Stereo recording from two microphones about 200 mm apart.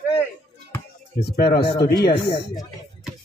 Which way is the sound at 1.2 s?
50° left (ahead or behind).